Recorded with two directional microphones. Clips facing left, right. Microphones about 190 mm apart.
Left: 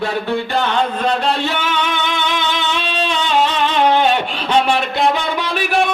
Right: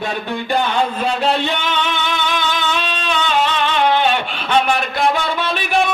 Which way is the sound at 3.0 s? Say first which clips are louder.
Left 3 dB; 35° left (ahead or behind).